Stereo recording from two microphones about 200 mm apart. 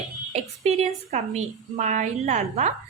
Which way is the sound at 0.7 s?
35° right (ahead or behind).